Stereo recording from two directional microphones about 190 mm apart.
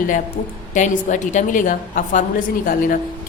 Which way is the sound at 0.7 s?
40° left (ahead or behind).